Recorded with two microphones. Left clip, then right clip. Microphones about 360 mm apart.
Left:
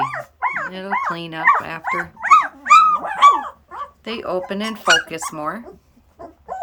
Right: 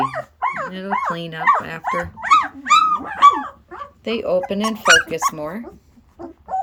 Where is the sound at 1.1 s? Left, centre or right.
Centre.